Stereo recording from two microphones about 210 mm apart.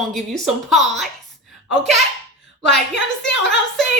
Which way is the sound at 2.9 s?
60° left (ahead or behind).